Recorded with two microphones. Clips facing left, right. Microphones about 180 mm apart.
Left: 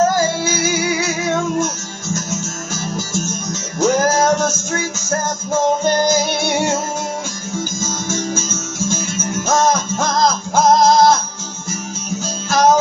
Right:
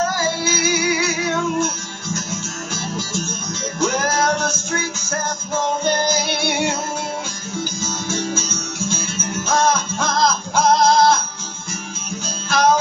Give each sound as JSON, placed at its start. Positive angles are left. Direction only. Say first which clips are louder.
{"t": 0.1, "sound": "music", "louder": "left 4 dB", "side_deg": 45}
{"t": 3.8, "sound": "music", "louder": "left 5 dB", "side_deg": 45}
{"t": 12.4, "sound": "music", "louder": "left 3 dB", "side_deg": 45}